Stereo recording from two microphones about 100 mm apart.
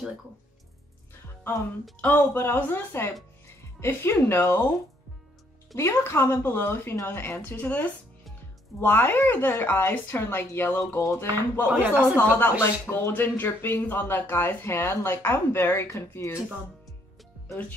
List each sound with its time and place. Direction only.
2.0 s speech: 20° left (ahead or behind)
5.8 s speech: 30° left (ahead or behind)
11.7 s speech: 15° right (ahead or behind)
12.2 s speech: 20° left (ahead or behind)